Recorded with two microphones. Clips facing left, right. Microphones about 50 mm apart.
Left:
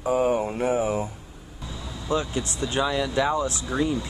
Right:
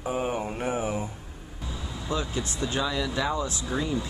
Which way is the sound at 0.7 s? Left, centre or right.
Centre.